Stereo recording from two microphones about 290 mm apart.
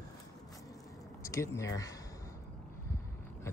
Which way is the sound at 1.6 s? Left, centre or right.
Centre.